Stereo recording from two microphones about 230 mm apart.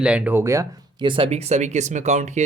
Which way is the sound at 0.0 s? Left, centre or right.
Centre.